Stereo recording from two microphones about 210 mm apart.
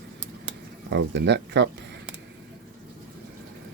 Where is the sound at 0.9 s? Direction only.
55° right (ahead or behind).